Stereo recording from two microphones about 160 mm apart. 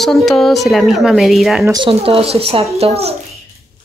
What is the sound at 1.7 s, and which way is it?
Speech, 30° right (ahead or behind).